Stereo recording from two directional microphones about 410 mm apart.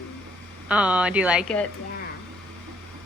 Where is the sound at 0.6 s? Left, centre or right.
Centre.